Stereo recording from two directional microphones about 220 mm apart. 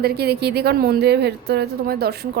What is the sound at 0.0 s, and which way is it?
A woman's voice, 45° right (ahead or behind).